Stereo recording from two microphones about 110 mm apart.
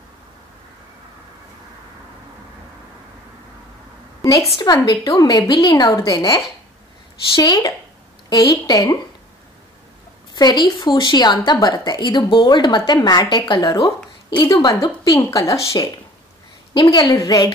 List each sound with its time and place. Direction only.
4.2 s a sound: 30° left (ahead or behind)
4.8 s speech: 35° left (ahead or behind)
10.3 s a woman's voice: 40° left (ahead or behind)
16.9 s speech: 30° left (ahead or behind)